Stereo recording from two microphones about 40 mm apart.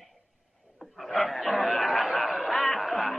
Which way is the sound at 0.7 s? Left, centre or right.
Centre.